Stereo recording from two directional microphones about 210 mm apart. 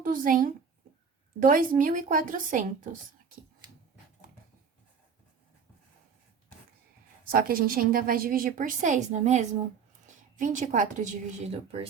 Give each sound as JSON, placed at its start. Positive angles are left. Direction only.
{"t": 0.0, "sound": "a woman's voice", "side_deg": -40}
{"t": 7.3, "sound": "a woman's voice", "side_deg": -45}